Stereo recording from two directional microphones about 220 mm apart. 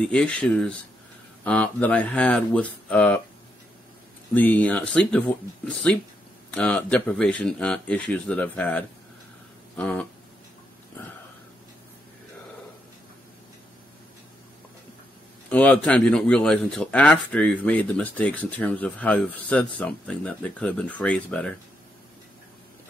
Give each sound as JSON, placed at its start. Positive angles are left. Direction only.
{"t": 0.0, "sound": "speech", "side_deg": 5}
{"t": 4.3, "sound": "speech", "side_deg": 10}
{"t": 15.5, "sound": "speech", "side_deg": 5}